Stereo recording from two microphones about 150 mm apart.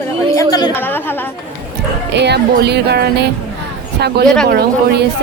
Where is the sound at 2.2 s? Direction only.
90° right.